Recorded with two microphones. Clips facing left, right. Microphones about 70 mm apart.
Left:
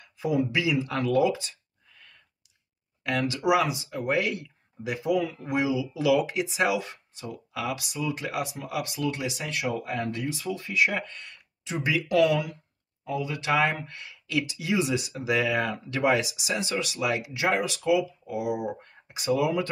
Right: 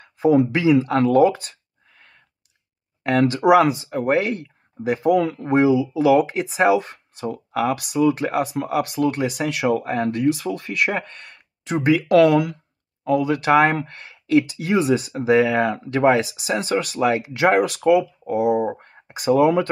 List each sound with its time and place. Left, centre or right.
0.0 s a sound: right
0.4 s speech: right
3.0 s speech: right
5.5 s speech: right
11.0 s speech: right
15.7 s speech: right
17.3 s speech: right